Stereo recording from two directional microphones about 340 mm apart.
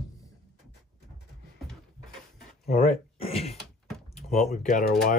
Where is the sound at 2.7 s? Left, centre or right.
Centre.